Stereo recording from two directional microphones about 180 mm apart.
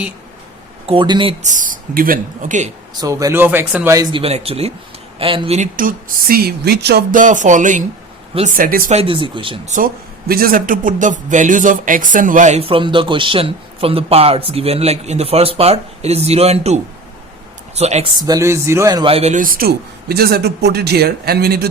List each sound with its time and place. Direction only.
0.9 s speech: 25° right (ahead or behind); by 2.7 s 45° right (ahead or behind)
2.9 s speech: 20° right (ahead or behind)
3.9 s speech: 20° right (ahead or behind)
4.2 s speech: 35° right (ahead or behind)
5.5 s speech: 50° right (ahead or behind)
9.0 s speech: 30° right (ahead or behind)
9.6 s speech: 50° right (ahead or behind)
18.2 s speech: 20° right (ahead or behind)
19.1 s a man's voice: 40° right (ahead or behind); by 21.7 s 60° right (ahead or behind)